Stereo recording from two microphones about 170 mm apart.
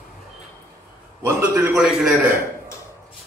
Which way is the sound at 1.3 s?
15° right (ahead or behind).